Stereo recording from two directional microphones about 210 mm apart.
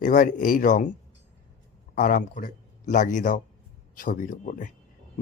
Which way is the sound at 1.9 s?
40° left (ahead or behind).